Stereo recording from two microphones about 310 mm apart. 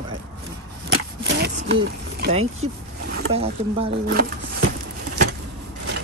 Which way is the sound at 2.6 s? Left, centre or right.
Centre.